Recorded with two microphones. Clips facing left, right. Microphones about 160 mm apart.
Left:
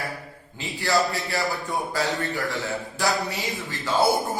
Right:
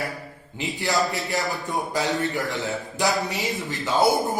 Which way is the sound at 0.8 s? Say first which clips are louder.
Left 1 dB; 20° right (ahead or behind).